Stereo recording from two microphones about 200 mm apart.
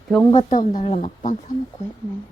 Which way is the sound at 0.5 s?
40° left (ahead or behind).